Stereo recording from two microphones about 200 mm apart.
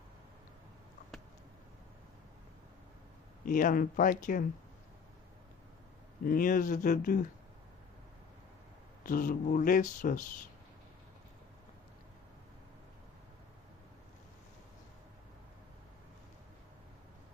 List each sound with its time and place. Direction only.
3.4 s speech: 40° left (ahead or behind)
6.2 s speech: 45° left (ahead or behind)
9.0 s speech: 45° left (ahead or behind)